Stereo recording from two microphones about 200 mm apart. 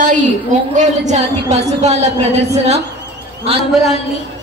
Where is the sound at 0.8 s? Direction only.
35° right (ahead or behind).